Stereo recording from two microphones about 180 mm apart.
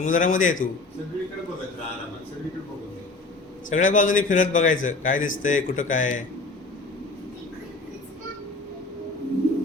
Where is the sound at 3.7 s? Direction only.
45° left (ahead or behind).